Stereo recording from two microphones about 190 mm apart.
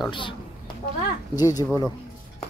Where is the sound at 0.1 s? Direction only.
25° left (ahead or behind).